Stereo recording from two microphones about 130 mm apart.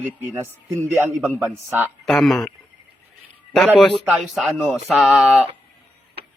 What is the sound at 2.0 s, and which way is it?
Speech, centre (ahead or behind).